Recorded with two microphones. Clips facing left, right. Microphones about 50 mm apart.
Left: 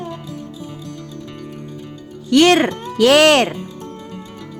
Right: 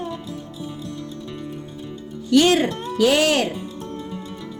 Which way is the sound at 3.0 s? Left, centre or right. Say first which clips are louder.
Left 6 dB; left.